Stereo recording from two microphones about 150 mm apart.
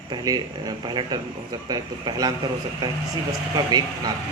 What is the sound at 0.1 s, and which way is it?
Speech, 30° right (ahead or behind).